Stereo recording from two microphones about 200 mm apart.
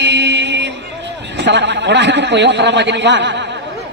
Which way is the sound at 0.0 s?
60° right (ahead or behind).